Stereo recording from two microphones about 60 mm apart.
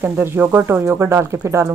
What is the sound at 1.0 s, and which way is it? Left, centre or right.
Speech, right.